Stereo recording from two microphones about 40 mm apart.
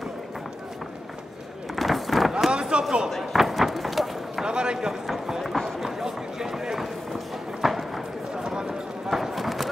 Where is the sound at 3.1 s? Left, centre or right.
Centre.